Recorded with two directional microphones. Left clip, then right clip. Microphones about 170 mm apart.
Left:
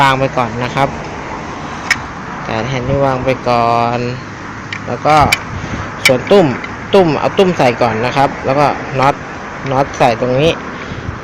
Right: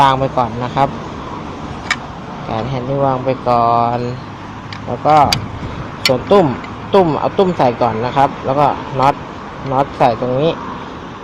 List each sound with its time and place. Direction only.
0.0 s speech: 10° left (ahead or behind)
2.5 s speech: 10° left (ahead or behind)